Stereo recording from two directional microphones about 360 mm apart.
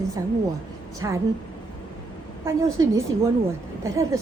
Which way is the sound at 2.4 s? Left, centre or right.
Centre.